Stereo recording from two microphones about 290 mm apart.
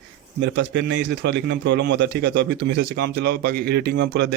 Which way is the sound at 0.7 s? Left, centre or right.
Right.